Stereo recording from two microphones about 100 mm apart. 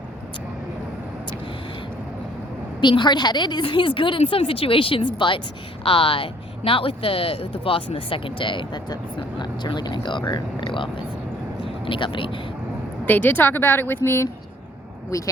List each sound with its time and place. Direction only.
2.8 s speech: 50° left (ahead or behind)
13.1 s speech: 20° left (ahead or behind)